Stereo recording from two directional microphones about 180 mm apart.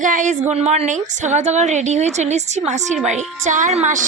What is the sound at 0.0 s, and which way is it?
A woman's voice, 45° right (ahead or behind).